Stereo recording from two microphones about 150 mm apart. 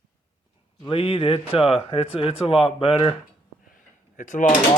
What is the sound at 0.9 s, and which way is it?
Speech, 40° left (ahead or behind).